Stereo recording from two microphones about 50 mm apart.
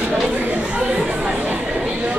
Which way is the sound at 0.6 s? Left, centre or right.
Right.